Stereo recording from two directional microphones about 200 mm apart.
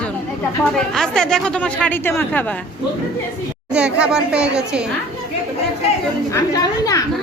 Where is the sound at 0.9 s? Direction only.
5° left (ahead or behind).